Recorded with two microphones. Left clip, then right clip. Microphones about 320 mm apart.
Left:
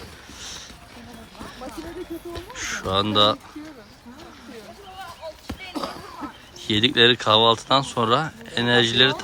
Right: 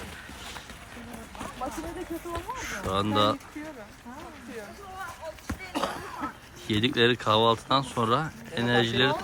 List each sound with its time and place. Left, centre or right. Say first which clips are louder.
2.6 s speech: left 7 dB; centre
5.7 s a sound: right 1 dB; right
6.7 s speech: left 7 dB; centre